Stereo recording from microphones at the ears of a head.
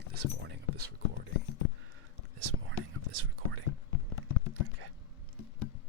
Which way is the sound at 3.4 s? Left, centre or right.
Left.